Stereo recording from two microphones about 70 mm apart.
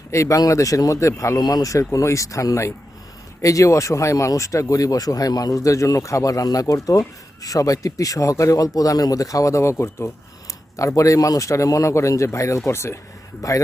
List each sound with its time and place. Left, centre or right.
0.1 s speech: left
1.4 s speech: left
1.9 s speech: left
10.8 s speech: left
13.4 s speech: left